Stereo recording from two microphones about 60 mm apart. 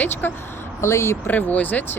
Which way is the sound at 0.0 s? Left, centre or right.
Left.